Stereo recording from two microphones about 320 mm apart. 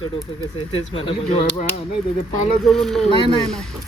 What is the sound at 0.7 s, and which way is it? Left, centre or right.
Speech, centre.